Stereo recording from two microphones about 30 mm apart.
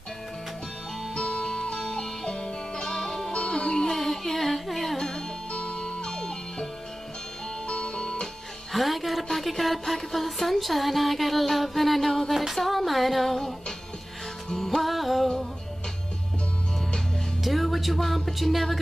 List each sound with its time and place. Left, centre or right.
1.1 s music: left
3.3 s music: left
3.9 s music: centre
5.5 s music: left
7.6 s music: left
8.7 s a woman's voice: centre
14.5 s music: centre
14.8 s music: centre
17.4 s speech: centre